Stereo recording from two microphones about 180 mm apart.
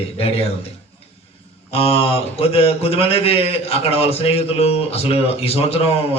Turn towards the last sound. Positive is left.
turn(degrees=35)  # may be behind; listen again after turning